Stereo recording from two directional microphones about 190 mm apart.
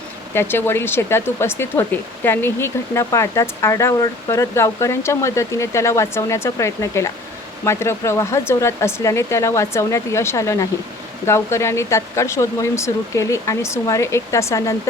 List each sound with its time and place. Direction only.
0.3 s speech: 10° left (ahead or behind)